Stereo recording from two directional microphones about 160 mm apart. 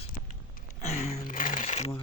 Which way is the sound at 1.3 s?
60° left (ahead or behind).